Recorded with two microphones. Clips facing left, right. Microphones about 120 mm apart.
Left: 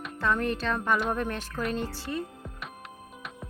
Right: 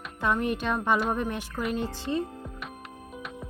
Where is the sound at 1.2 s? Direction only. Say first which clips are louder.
Right 1 dB; 15° right (ahead or behind).